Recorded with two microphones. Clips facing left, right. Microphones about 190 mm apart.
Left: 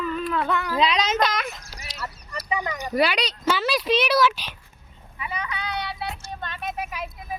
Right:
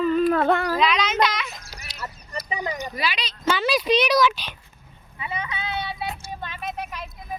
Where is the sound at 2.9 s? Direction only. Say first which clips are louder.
Left 7 dB; 65° left (ahead or behind).